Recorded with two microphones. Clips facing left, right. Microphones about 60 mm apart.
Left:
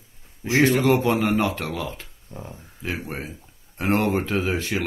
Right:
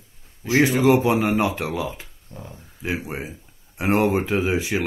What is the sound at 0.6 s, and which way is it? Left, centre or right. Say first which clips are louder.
Speech: right 1 dB; centre.